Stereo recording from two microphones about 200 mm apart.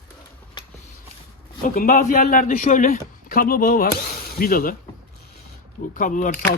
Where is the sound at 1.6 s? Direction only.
45° left (ahead or behind).